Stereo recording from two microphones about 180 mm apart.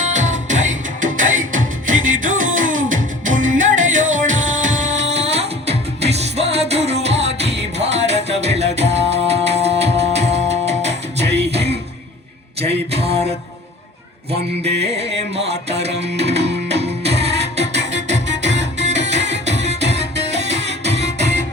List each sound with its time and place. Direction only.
0.0 s music: 40° right (ahead or behind)
14.6 s music: 35° right (ahead or behind)